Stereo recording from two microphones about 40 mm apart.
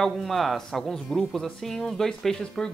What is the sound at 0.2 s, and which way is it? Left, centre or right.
A man's voice, centre.